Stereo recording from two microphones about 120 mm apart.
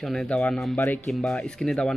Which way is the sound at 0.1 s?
5° left (ahead or behind).